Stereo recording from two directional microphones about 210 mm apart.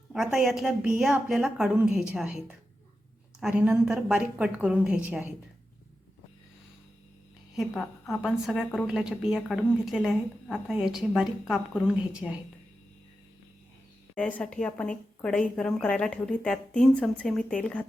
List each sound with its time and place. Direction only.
0.1 s a woman's voice: centre (ahead or behind)
7.5 s a woman's voice: centre (ahead or behind)
14.2 s a woman's voice: 5° left (ahead or behind)